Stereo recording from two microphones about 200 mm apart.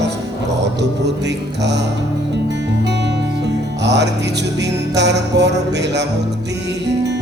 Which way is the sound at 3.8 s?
60° right (ahead or behind).